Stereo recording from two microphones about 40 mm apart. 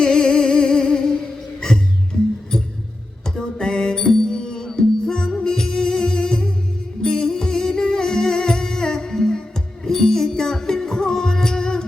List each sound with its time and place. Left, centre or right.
0.0 s music: centre
3.2 s music: centre